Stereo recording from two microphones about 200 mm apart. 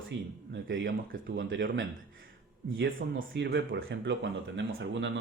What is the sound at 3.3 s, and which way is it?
Speech, 70° right (ahead or behind).